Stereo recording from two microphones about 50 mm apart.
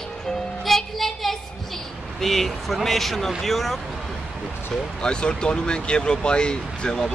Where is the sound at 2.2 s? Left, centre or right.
Centre.